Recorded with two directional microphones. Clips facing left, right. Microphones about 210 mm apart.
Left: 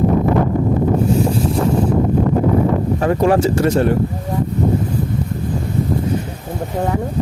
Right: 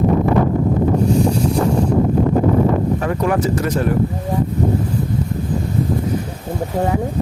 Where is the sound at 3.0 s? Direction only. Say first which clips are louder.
Left 4 dB; 30° left (ahead or behind).